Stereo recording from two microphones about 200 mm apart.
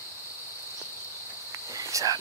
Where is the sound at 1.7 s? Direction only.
15° right (ahead or behind).